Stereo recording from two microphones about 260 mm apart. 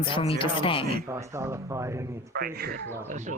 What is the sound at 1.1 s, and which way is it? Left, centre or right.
Speech, centre.